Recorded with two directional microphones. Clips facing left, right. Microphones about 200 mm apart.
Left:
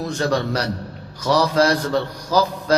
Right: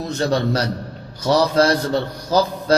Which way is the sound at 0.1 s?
25° right (ahead or behind).